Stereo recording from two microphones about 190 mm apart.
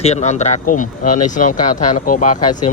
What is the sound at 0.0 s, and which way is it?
Speech, 35° left (ahead or behind).